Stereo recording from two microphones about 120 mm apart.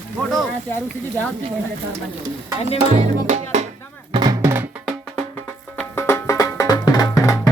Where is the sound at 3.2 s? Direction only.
75° right (ahead or behind).